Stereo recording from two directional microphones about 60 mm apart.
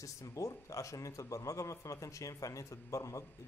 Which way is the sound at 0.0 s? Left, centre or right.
Left.